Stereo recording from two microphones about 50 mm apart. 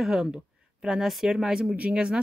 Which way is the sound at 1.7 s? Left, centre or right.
Right.